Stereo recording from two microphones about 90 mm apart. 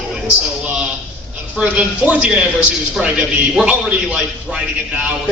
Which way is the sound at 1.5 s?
15° right (ahead or behind).